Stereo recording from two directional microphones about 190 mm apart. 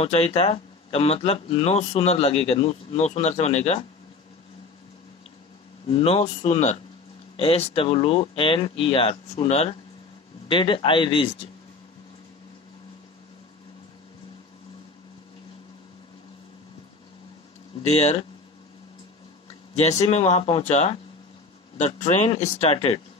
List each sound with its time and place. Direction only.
0.0 s speech: 30° left (ahead or behind)
5.9 s speech: 30° left (ahead or behind)
17.8 s speech: 35° left (ahead or behind)
19.7 s speech: 35° left (ahead or behind)